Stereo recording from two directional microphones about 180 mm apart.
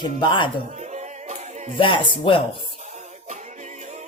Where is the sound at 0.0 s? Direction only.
25° left (ahead or behind).